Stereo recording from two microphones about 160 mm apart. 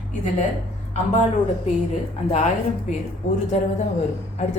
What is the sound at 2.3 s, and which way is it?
Speech, 45° left (ahead or behind).